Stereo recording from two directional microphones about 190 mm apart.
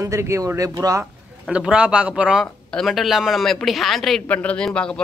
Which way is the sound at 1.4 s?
5° right (ahead or behind).